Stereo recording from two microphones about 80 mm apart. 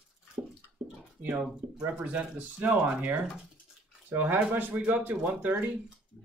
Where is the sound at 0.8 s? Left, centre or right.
Right.